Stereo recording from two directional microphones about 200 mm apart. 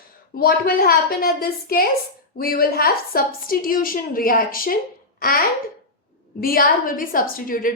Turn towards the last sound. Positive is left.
turn(degrees=45)  # may be behind; listen again after turning